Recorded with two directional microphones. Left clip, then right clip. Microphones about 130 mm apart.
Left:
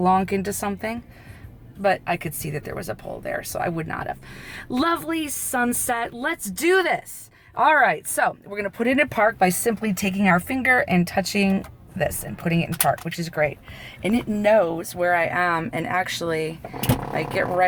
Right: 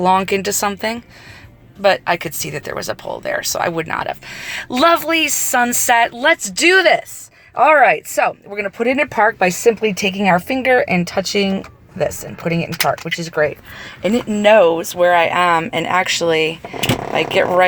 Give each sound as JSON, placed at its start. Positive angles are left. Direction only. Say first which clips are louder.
{"t": 0.0, "sound": "speech", "louder": "right 6 dB", "side_deg": -5}
{"t": 6.2, "sound": "speech", "louder": "right 10 dB", "side_deg": -25}
{"t": 8.2, "sound": "speech", "louder": "right 5 dB", "side_deg": -5}
{"t": 9.4, "sound": "speech", "louder": "right 7 dB", "side_deg": -25}
{"t": 12.7, "sound": "speech", "louder": "right 5 dB", "side_deg": -65}
{"t": 13.1, "sound": "speech", "louder": "right 6 dB", "side_deg": -20}